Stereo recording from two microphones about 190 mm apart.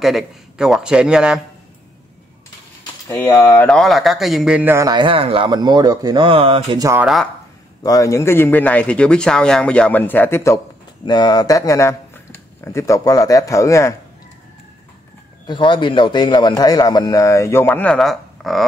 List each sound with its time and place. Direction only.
0.0 s a man's voice: centre (ahead or behind)
3.1 s a man's voice: 10° left (ahead or behind); by 6.8 s 30° right (ahead or behind)
6.8 s a man's voice: 15° right (ahead or behind)
7.8 s speech: 20° left (ahead or behind)
15.4 s a man's voice: 25° left (ahead or behind); by 18.7 s centre (ahead or behind)